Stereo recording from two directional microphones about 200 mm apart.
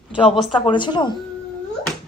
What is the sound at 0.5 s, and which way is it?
Speech, 25° left (ahead or behind).